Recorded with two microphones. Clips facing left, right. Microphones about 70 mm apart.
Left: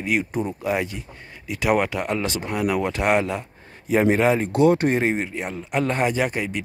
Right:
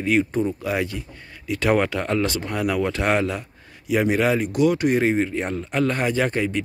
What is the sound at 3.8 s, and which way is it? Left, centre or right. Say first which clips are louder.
Speech: left 2 dB; left.